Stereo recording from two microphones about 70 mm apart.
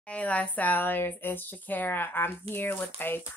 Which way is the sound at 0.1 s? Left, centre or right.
Centre.